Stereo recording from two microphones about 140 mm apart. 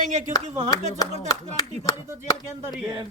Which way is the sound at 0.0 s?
65° right (ahead or behind).